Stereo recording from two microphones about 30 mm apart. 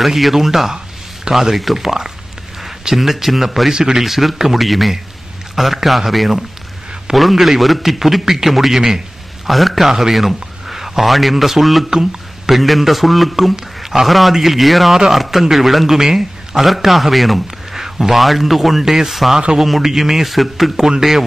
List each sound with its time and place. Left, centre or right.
0.0 s a man's voice: centre
3.7 s speech: right
4.0 s a man's voice: centre
9.5 s a man's voice: centre
11.9 s speech: right
12.4 s a man's voice: centre
13.8 s a man's voice: centre
17.7 s a sound: centre
18.1 s a man's voice: centre